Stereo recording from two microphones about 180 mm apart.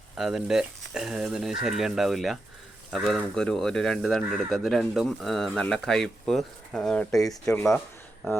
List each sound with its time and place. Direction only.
0.2 s speech: 5° right (ahead or behind)
7.3 s speech: 20° left (ahead or behind)